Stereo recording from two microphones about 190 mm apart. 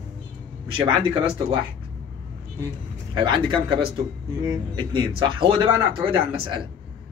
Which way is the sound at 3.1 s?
25° right (ahead or behind).